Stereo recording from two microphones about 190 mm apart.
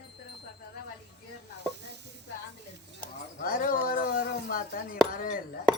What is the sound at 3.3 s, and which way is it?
Chink, 45° left (ahead or behind).